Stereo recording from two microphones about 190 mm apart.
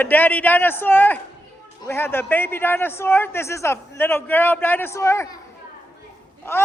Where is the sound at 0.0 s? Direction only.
10° left (ahead or behind).